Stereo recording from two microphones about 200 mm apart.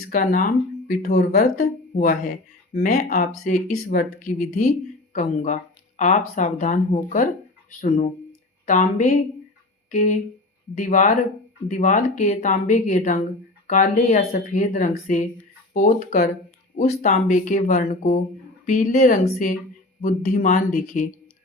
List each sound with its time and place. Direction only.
0.1 s a woman's voice: 45° left (ahead or behind)